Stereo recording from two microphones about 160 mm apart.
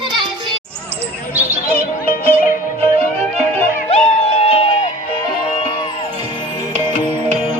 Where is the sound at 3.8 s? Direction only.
40° left (ahead or behind).